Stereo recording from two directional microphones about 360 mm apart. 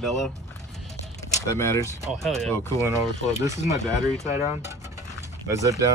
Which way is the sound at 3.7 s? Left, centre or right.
Centre.